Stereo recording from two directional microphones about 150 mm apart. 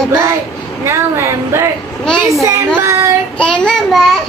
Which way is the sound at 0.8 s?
20° right (ahead or behind).